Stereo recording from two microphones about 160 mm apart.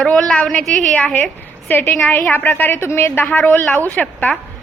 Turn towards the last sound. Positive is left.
turn(degrees=10)  # may be behind; listen again after turning